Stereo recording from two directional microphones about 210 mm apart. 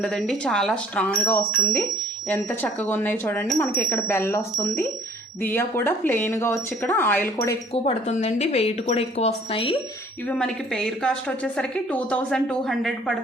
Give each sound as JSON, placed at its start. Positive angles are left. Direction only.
{"t": 0.0, "sound": "a woman's voice", "side_deg": 0}
{"t": 7.3, "sound": "speech", "side_deg": 25}
{"t": 10.2, "sound": "a woman's voice", "side_deg": 5}